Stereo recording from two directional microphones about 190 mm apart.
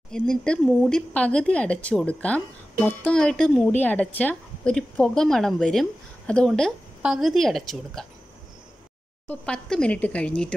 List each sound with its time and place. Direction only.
0.1 s a woman's voice: 5° left (ahead or behind)
9.3 s a woman's voice: 5° left (ahead or behind)